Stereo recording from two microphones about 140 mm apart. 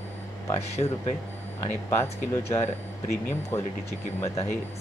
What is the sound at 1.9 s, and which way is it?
Speech, 20° left (ahead or behind).